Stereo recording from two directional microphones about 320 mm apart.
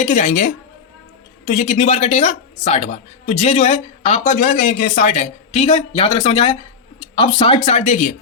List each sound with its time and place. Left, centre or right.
0.0 s speech: left